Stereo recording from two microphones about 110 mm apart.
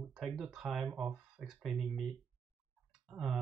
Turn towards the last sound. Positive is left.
turn(degrees=-5)  # may be behind; listen again after turning